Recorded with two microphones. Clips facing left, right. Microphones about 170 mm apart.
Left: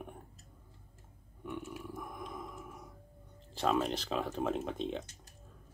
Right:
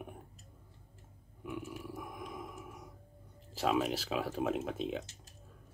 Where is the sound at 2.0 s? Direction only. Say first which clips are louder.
Even; 5° right (ahead or behind).